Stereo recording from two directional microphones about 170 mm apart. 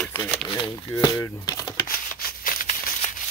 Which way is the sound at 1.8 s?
60° left (ahead or behind).